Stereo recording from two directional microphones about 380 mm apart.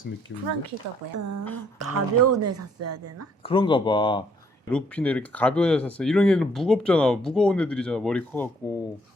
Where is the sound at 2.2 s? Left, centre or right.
Right.